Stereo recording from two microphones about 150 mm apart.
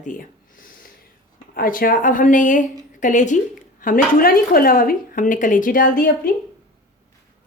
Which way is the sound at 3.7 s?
65° left (ahead or behind).